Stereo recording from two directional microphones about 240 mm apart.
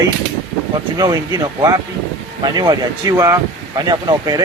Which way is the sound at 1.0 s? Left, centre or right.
Centre.